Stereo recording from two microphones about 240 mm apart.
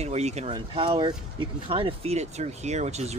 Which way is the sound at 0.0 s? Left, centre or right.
Right.